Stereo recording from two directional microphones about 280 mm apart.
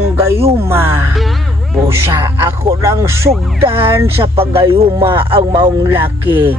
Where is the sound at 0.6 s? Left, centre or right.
Centre.